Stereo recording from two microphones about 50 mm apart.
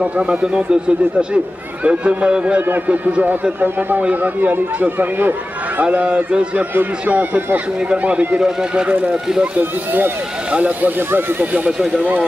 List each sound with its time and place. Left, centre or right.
0.0 s speech: right
1.9 s speech: right
8.4 s speech: centre
8.8 s speech: right
9.1 s speech: centre
9.6 s speech: right
11.0 s speech: right